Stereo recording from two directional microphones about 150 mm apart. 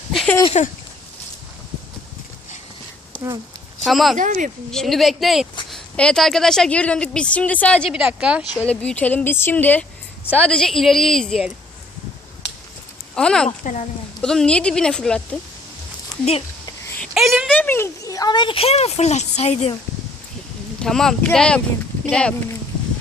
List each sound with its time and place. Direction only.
0.1 s a sound: centre (ahead or behind)
0.6 s speech: 50° left (ahead or behind)
3.8 s speech: centre (ahead or behind)
4.2 s speech: 60° right (ahead or behind)
4.7 s a woman's voice: centre (ahead or behind)
7.9 s speech: 5° right (ahead or behind)
8.6 s a woman's voice: 10° left (ahead or behind)
13.1 s speech: 5° left (ahead or behind)
17.2 s speech: centre (ahead or behind)
17.5 s speech: 10° left (ahead or behind); by 19.7 s 45° left (ahead or behind)
20.7 s a woman's voice: 5° left (ahead or behind)